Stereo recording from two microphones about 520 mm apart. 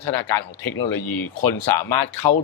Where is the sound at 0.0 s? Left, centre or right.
Left.